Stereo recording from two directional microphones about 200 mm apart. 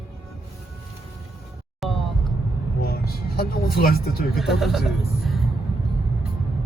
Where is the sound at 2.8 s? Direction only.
50° left (ahead or behind).